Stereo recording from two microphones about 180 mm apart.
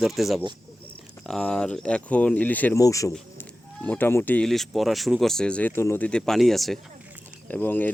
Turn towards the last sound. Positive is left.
turn(degrees=10)  # may be behind; listen again after turning